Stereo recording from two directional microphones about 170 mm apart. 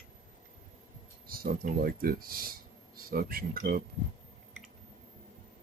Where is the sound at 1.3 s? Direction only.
60° right (ahead or behind).